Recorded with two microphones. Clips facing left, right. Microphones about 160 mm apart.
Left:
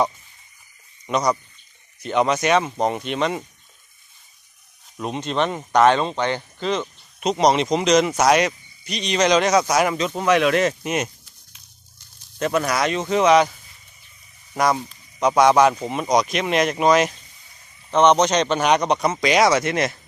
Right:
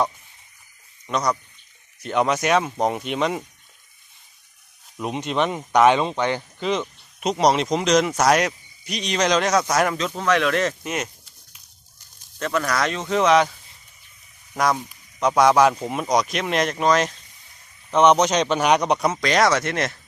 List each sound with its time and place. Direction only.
1.0 s speech: 5° left (ahead or behind)
4.9 s speech: 10° right (ahead or behind); by 11.1 s 20° left (ahead or behind)
12.4 s speech: 15° left (ahead or behind)
12.9 s speech: 5° left (ahead or behind)
14.5 s speech: 5° left (ahead or behind)
17.9 s speech: 10° right (ahead or behind)
19.1 s speech: 5° left (ahead or behind)